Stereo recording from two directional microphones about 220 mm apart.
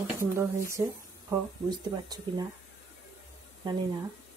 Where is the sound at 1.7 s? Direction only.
20° right (ahead or behind).